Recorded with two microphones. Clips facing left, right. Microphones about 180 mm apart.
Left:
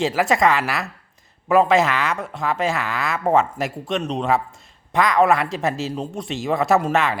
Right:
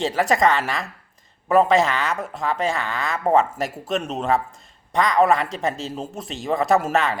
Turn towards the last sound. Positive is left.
turn(degrees=0)  # may be behind; listen again after turning